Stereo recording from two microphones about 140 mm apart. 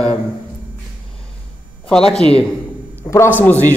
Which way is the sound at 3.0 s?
15° left (ahead or behind).